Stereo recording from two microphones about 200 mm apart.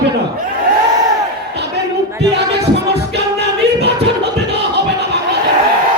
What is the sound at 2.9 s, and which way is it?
Music, 55° right (ahead or behind).